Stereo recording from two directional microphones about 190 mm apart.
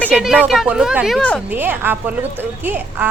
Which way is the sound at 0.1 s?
5° right (ahead or behind).